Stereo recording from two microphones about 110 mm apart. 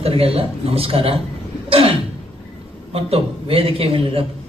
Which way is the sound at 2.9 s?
65° right (ahead or behind).